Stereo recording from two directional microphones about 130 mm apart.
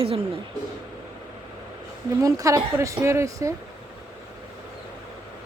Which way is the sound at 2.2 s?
25° right (ahead or behind).